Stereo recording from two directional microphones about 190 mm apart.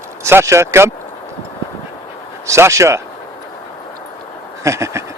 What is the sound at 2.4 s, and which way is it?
Speech, 15° right (ahead or behind).